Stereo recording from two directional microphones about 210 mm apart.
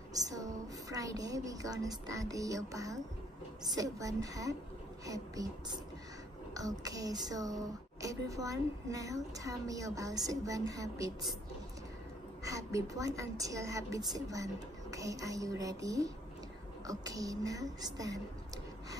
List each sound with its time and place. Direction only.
0.1 s speech: 15° right (ahead or behind)
12.4 s speech: 15° right (ahead or behind)